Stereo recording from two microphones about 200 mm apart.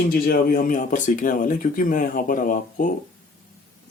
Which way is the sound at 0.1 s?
45° left (ahead or behind).